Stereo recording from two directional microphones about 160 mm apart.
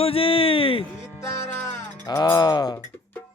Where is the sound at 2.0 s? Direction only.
25° left (ahead or behind).